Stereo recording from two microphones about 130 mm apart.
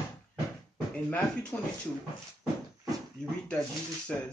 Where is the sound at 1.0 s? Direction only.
10° left (ahead or behind).